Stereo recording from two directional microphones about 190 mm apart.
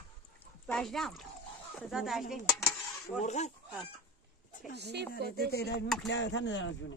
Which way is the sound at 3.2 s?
35° left (ahead or behind).